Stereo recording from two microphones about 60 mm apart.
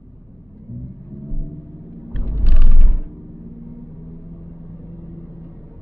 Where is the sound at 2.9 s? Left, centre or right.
Centre.